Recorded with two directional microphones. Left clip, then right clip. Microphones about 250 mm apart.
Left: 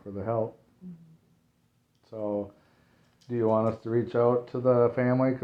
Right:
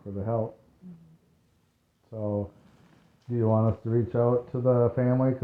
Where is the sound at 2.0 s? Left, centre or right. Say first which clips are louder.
Even; centre.